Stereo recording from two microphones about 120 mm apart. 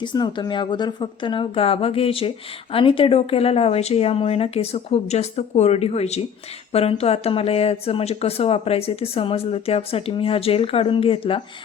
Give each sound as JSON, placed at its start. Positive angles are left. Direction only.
{"t": 0.0, "sound": "speech", "side_deg": 40}